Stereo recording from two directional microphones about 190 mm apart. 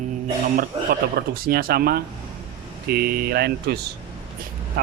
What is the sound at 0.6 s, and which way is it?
Speech, 55° right (ahead or behind).